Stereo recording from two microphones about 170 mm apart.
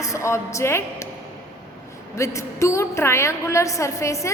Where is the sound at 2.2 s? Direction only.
20° left (ahead or behind).